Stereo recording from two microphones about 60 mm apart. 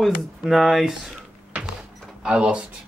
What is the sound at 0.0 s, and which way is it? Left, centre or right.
A man's voice, centre.